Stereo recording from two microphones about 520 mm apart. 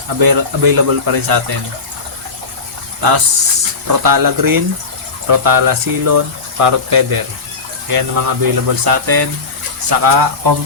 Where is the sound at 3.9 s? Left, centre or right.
Right.